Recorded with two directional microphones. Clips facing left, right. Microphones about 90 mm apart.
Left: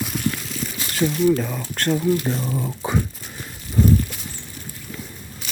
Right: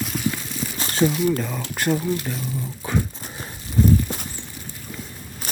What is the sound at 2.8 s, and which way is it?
Crumpling, 25° left (ahead or behind).